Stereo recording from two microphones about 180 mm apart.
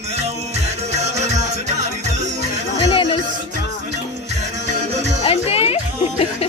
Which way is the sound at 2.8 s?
25° left (ahead or behind).